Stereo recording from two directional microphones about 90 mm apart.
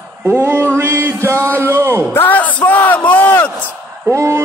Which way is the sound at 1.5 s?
25° right (ahead or behind).